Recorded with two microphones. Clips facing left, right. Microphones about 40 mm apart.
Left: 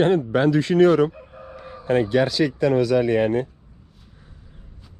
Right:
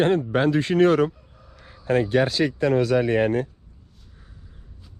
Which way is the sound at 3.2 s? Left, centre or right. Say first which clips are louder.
Left 1 dB; right.